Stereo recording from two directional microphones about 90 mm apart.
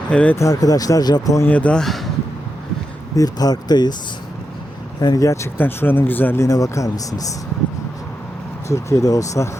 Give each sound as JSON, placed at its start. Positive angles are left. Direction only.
{"t": 0.1, "sound": "speech", "side_deg": 15}
{"t": 0.3, "sound": "speech", "side_deg": 40}
{"t": 1.5, "sound": "speech", "side_deg": 15}
{"t": 3.2, "sound": "speech", "side_deg": 45}
{"t": 4.9, "sound": "speech", "side_deg": 45}
{"t": 5.5, "sound": "speech", "side_deg": 20}
{"t": 8.7, "sound": "speech", "side_deg": 35}